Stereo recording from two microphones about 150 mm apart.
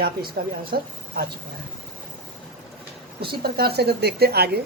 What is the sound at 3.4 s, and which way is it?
A woman's voice, 90° right.